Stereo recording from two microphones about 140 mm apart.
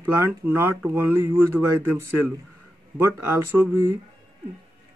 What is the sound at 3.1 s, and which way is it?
Speech, 15° right (ahead or behind).